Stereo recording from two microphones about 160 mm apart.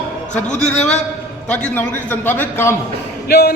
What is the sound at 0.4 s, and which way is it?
Speech, 45° left (ahead or behind).